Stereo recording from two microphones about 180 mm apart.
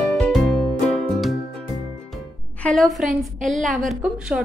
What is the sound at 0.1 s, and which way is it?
Music, centre (ahead or behind).